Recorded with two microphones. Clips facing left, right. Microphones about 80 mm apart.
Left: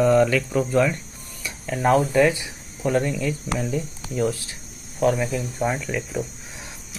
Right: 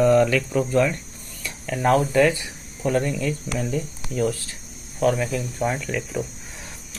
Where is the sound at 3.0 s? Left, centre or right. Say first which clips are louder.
Even; centre.